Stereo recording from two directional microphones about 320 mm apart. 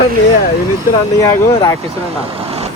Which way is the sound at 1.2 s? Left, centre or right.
Centre.